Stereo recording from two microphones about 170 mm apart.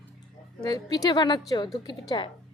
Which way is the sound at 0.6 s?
20° left (ahead or behind).